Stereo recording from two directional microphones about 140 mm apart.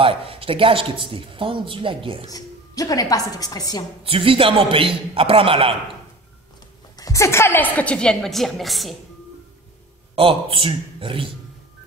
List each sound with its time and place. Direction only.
0.0 s speech: 40° right (ahead or behind)
2.2 s a woman's voice: 25° left (ahead or behind)
4.0 s speech: 40° right (ahead or behind)
7.0 s a woman's voice: 20° left (ahead or behind); by 8.9 s centre (ahead or behind)
10.1 s speech: 40° right (ahead or behind)